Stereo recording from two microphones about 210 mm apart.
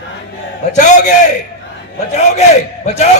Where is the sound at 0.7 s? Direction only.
35° left (ahead or behind).